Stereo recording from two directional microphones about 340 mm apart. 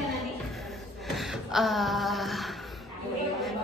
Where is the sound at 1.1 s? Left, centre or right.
Centre.